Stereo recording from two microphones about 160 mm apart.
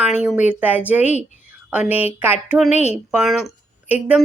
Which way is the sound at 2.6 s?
45° left (ahead or behind).